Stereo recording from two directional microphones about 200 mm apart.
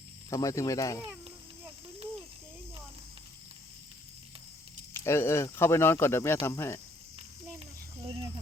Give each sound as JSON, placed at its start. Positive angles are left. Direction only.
{"t": 0.3, "sound": "speech", "side_deg": 15}
{"t": 4.9, "sound": "speech", "side_deg": 10}